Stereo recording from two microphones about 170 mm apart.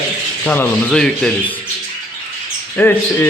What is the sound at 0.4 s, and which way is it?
Speech, 10° left (ahead or behind).